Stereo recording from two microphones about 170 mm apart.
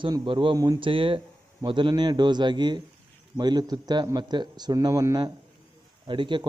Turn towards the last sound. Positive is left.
turn(degrees=-30)  # may be behind; listen again after turning